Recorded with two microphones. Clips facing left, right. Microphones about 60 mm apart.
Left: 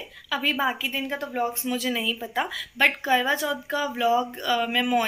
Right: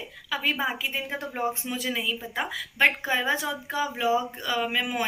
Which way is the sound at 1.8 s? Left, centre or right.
Centre.